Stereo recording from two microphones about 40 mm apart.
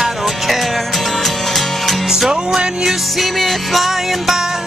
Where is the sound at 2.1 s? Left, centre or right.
Centre.